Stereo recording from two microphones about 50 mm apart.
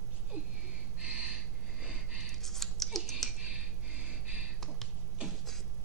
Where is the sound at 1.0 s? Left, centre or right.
Right.